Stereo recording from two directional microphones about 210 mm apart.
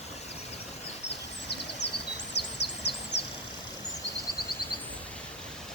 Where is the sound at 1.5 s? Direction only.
50° left (ahead or behind).